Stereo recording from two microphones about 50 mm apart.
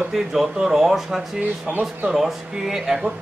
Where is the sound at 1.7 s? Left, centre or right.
Right.